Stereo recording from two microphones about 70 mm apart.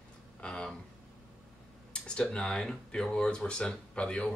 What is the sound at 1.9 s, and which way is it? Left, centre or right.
Speech, centre.